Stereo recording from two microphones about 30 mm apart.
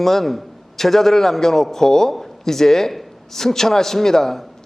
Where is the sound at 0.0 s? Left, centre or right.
Centre.